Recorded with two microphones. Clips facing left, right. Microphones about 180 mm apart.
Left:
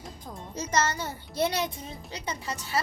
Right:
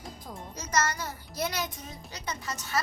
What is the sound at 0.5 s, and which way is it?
A child's voice, 25° left (ahead or behind).